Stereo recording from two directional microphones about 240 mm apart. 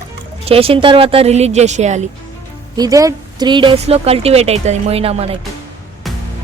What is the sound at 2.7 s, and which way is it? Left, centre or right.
Speech, centre.